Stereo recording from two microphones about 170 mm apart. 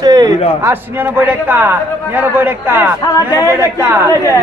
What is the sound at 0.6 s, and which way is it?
A man's voice, 15° right (ahead or behind).